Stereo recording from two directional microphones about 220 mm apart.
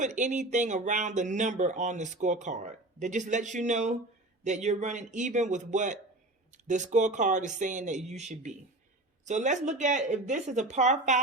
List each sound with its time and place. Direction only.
0.0 s speech: 35° right (ahead or behind)